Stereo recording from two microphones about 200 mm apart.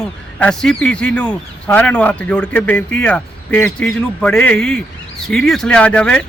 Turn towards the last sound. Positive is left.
turn(degrees=5)  # may be behind; listen again after turning